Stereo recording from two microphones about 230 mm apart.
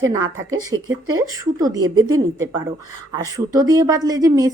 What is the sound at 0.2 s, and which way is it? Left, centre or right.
Speech, right.